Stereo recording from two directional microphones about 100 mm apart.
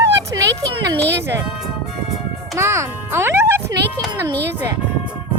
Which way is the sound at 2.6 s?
25° right (ahead or behind).